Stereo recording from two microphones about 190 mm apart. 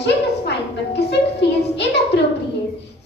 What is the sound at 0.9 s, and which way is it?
Music, 65° left (ahead or behind).